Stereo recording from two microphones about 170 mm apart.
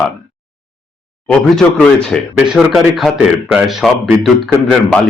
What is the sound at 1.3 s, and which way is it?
Speech, 5° left (ahead or behind).